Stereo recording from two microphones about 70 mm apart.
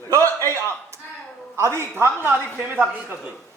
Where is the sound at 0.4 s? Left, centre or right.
Right.